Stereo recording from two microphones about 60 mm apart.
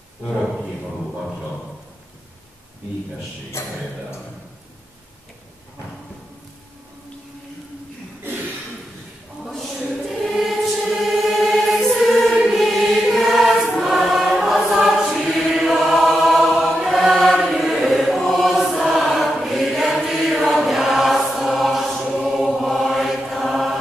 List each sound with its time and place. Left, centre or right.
9.4 s choir: centre
22.1 s mantra: centre